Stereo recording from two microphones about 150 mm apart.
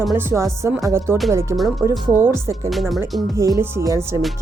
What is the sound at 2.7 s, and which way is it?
Speech, centre (ahead or behind).